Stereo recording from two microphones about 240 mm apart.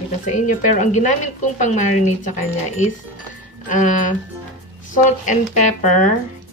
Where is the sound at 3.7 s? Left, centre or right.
Left.